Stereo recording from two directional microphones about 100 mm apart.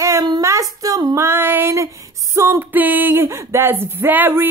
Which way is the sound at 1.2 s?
20° right (ahead or behind).